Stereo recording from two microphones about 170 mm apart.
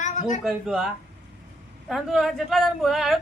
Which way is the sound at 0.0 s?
45° left (ahead or behind).